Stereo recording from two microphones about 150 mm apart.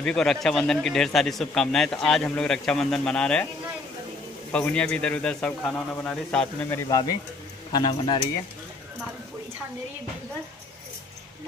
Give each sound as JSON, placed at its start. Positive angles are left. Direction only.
{"t": 0.0, "sound": "speech", "side_deg": 5}
{"t": 4.5, "sound": "a man's voice", "side_deg": 10}